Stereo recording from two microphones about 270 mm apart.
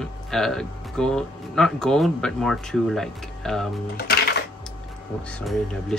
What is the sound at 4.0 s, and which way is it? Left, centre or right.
Music, left.